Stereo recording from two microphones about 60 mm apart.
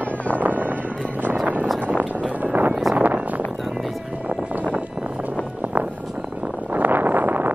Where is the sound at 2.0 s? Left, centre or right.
Right.